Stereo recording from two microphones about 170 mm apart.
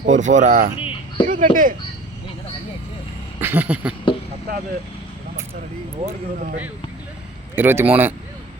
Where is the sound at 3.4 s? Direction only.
10° right (ahead or behind).